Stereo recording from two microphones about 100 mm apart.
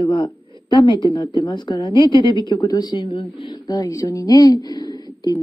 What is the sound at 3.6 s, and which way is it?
A woman's voice, 35° left (ahead or behind).